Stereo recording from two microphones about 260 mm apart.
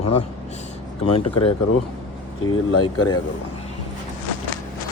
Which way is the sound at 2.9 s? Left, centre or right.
Left.